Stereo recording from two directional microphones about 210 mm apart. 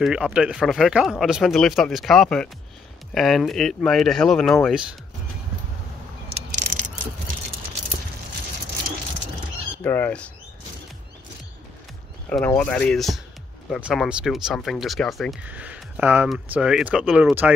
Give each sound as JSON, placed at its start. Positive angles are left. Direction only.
{"t": 0.0, "sound": "speech", "side_deg": -5}
{"t": 6.7, "sound": "a sound", "side_deg": -35}
{"t": 9.8, "sound": "speech", "side_deg": 10}
{"t": 12.3, "sound": "speech", "side_deg": 5}